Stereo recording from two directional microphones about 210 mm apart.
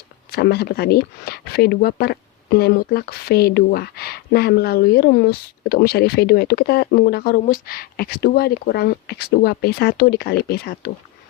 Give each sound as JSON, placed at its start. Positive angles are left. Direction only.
{"t": 0.3, "sound": "speech", "side_deg": 50}